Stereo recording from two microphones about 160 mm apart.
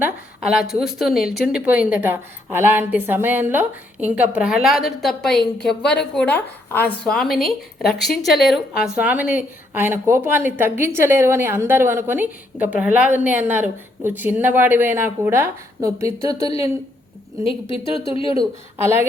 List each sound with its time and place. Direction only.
0.0 s speech: 5° right (ahead or behind); by 16.5 s 20° right (ahead or behind)
17.4 s speech: 35° left (ahead or behind)
18.3 s speech: 15° right (ahead or behind)